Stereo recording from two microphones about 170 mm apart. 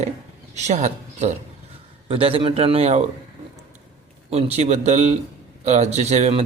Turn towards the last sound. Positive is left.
turn(degrees=-35)  # may be behind; listen again after turning